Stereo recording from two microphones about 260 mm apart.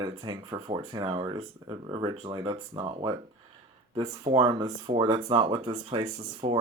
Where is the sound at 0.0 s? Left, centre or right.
Centre.